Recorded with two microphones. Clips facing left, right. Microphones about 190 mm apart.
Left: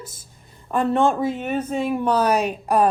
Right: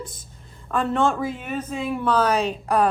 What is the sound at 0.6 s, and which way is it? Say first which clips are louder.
Speech: left 3 dB; 20° left (ahead or behind).